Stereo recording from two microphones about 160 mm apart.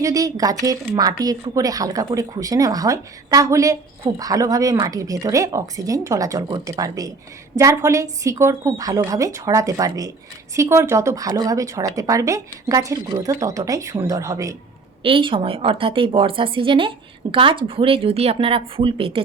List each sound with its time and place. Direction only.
0.0 s a woman's voice: 20° right (ahead or behind)
15.0 s a woman's voice: 35° right (ahead or behind)